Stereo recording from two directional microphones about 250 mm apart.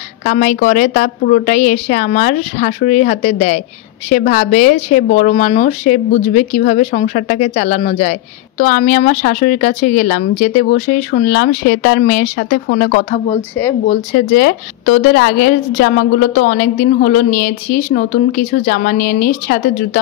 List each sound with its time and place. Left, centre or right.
0.2 s a woman's voice: left
13.3 s speech: centre
13.8 s speech: left